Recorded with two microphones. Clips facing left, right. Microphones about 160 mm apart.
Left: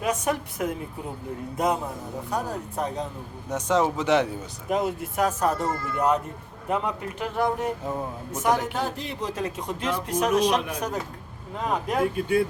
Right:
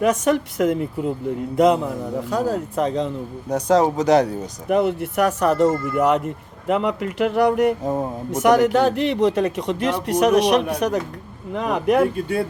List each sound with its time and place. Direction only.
0.0 s a man's voice: 75° right (ahead or behind)
3.5 s speech: 35° right (ahead or behind)
4.7 s a man's voice: 65° right (ahead or behind); by 7.8 s 80° right
7.9 s speech: 40° right (ahead or behind)
8.3 s speech: 85° right